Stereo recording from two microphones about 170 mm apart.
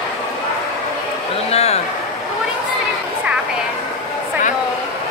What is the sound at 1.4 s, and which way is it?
Speech, 40° left (ahead or behind).